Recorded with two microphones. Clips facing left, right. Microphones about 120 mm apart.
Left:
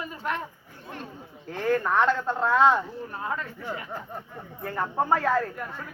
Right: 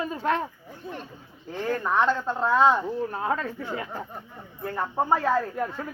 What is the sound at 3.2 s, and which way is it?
Speech, 65° right (ahead or behind).